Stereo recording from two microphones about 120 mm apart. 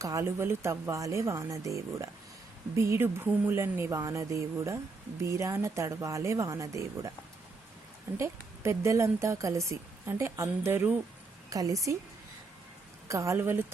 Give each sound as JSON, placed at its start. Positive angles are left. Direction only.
{"t": 0.0, "sound": "a woman's voice", "side_deg": -25}
{"t": 8.2, "sound": "a woman's voice", "side_deg": -25}
{"t": 11.4, "sound": "a woman's voice", "side_deg": -30}
{"t": 13.1, "sound": "a woman's voice", "side_deg": -25}